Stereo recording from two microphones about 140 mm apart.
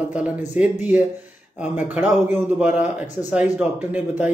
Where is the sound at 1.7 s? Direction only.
15° right (ahead or behind).